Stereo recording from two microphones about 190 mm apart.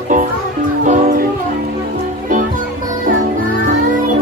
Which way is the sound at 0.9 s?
40° right (ahead or behind).